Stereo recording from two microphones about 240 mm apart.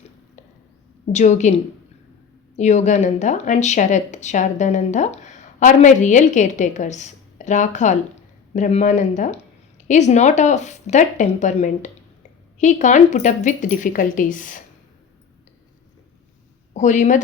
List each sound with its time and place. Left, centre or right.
1.1 s speech: left
16.7 s speech: left